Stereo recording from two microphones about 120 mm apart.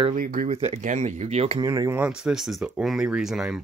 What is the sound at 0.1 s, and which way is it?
Speech, 75° right (ahead or behind).